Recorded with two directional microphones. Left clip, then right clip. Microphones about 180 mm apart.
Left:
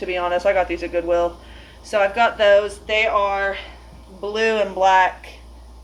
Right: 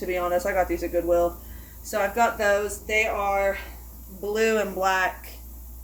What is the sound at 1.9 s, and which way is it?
Speech, 25° right (ahead or behind).